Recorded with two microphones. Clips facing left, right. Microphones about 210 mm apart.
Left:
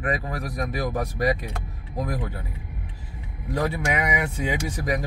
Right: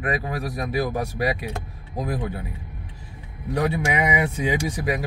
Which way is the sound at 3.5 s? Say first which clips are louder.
Right 2 dB; 15° right (ahead or behind).